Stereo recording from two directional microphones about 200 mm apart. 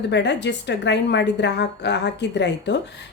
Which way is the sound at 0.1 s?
60° left (ahead or behind).